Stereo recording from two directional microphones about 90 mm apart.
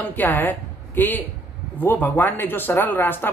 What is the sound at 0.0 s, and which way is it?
A woman's voice, 20° left (ahead or behind).